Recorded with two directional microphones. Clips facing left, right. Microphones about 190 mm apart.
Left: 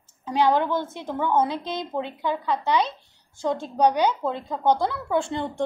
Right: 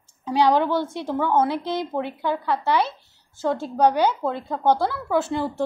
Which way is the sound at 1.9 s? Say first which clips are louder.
Right 2 dB; 15° left (ahead or behind).